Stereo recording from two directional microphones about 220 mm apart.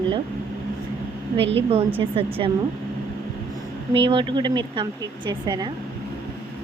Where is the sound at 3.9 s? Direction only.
25° right (ahead or behind).